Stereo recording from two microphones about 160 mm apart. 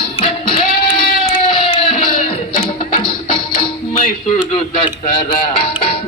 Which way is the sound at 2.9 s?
30° left (ahead or behind).